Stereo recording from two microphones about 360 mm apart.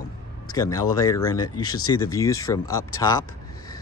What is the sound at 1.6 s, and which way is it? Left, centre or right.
Speech, left.